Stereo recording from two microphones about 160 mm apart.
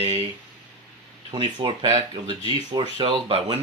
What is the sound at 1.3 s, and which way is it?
Speech, 30° right (ahead or behind).